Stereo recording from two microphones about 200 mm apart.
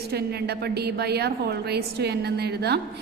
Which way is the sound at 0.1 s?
55° right (ahead or behind).